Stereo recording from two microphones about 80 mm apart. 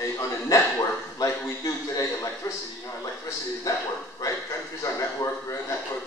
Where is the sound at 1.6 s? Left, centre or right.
Left.